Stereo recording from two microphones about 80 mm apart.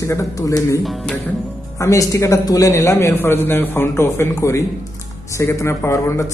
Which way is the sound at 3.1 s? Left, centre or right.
Left.